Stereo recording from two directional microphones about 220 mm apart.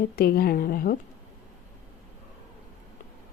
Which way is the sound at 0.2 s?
45° left (ahead or behind).